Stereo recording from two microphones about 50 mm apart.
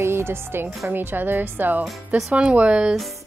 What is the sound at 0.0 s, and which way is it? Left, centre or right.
Speech, right.